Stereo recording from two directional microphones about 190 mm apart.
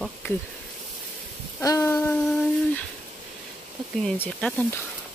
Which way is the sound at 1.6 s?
15° left (ahead or behind).